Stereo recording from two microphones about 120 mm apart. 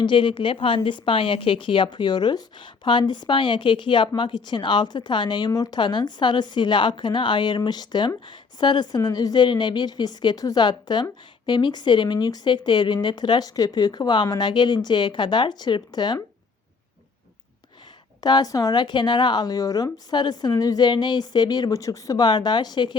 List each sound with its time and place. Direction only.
0.0 s a woman's voice: 45° left (ahead or behind)
18.2 s a woman's voice: 35° left (ahead or behind)